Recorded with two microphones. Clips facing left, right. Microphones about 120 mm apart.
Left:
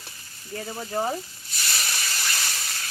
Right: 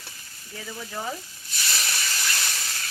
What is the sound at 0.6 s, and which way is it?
Speech, 40° left (ahead or behind).